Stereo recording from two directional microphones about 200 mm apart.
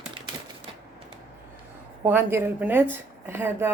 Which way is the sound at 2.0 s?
10° right (ahead or behind).